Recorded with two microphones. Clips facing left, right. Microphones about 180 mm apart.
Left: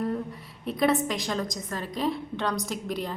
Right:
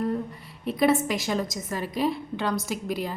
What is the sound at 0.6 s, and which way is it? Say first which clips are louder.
A woman's voice: right 2 dB; centre (ahead or behind).